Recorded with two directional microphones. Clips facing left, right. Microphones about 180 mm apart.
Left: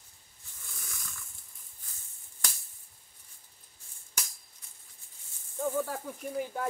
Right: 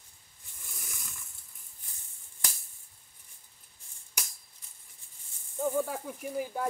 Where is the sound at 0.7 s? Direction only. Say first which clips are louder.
Even; 15° right (ahead or behind).